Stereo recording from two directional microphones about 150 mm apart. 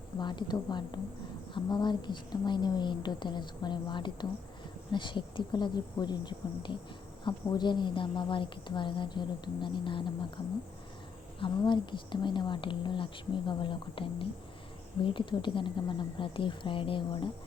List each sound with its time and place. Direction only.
0.2 s a woman's voice: 30° left (ahead or behind)